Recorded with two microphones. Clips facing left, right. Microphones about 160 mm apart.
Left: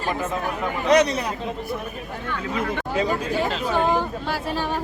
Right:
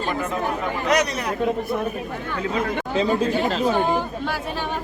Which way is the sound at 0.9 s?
30° left (ahead or behind).